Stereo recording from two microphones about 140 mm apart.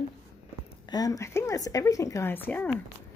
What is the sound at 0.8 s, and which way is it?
A woman's voice, 25° left (ahead or behind).